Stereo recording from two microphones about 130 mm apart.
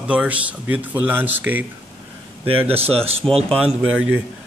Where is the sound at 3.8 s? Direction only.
5° right (ahead or behind).